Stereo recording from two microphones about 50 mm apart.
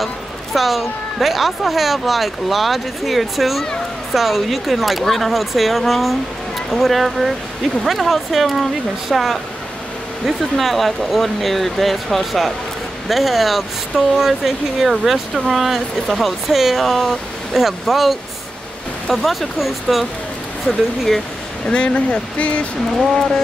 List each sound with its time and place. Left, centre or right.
0.0 s a woman's voice: centre
21.6 s speech: centre
22.9 s a woman's voice: centre